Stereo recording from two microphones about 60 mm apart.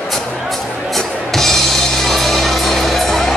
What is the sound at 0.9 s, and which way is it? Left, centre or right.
Music, centre.